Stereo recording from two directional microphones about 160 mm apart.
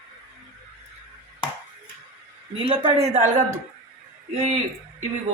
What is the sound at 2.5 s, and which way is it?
A woman's voice, 35° right (ahead or behind).